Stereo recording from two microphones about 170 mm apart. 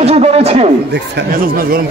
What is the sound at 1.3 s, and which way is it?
Speech, 60° right (ahead or behind).